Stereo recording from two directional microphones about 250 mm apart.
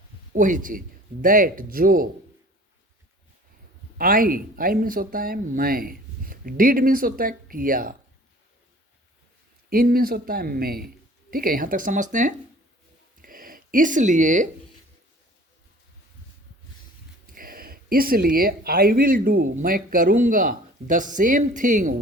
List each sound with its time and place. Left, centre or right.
0.3 s speech: right
3.9 s speech: right
9.6 s speech: right
13.2 s a sound: right
17.2 s speech: right